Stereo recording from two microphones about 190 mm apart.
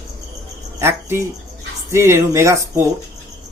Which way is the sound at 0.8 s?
15° right (ahead or behind).